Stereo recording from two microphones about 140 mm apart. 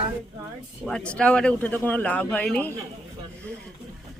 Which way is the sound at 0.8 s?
5° left (ahead or behind).